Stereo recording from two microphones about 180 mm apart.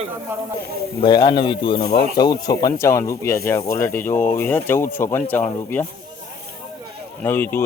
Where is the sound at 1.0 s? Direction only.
25° left (ahead or behind).